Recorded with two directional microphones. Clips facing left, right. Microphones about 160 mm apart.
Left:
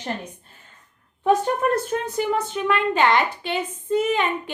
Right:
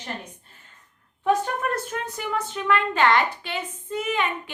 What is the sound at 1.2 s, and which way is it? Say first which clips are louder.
Speech: left 4 dB; 30° left (ahead or behind).